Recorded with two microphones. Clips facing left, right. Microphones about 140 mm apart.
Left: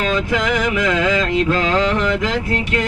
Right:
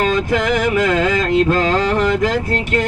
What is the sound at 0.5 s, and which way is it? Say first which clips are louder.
Mantra: right 4 dB; 40° right (ahead or behind).